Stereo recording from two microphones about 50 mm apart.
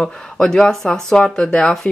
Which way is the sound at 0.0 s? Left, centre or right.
Centre.